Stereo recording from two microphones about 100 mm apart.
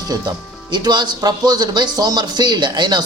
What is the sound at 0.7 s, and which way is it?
Speech, 45° right (ahead or behind).